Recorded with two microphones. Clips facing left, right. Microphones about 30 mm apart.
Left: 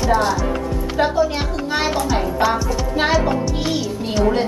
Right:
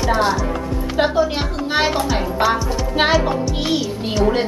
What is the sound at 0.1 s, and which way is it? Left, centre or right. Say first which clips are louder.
Speech: even; right.